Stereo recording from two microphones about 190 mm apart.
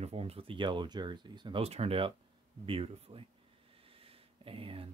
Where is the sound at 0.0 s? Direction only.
30° right (ahead or behind).